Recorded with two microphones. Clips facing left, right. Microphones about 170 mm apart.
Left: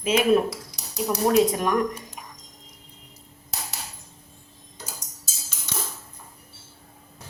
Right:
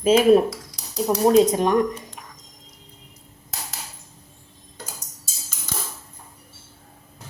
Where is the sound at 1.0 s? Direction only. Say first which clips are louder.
Right 4 dB; 25° right (ahead or behind).